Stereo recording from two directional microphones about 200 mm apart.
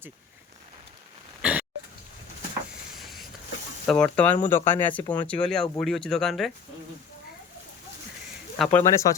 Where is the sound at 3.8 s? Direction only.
5° left (ahead or behind).